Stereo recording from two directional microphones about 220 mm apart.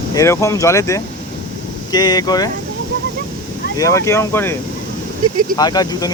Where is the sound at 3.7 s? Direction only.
15° left (ahead or behind).